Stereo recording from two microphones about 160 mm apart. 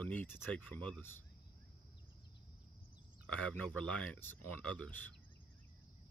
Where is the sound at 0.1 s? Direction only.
10° left (ahead or behind).